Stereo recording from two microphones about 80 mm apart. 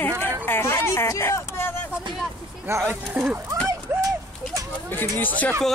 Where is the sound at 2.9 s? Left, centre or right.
Right.